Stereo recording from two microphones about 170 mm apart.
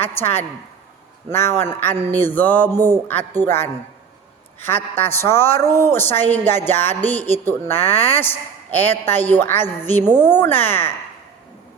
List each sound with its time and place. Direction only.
0.0 s a woman's voice: 15° left (ahead or behind)